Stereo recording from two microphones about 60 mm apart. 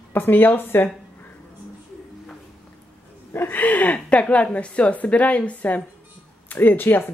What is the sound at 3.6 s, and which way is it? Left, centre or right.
A woman's voice, left.